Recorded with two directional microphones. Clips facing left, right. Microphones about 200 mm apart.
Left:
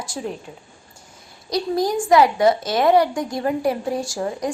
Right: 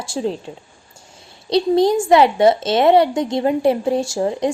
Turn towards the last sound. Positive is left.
turn(degrees=-25)  # may be behind; listen again after turning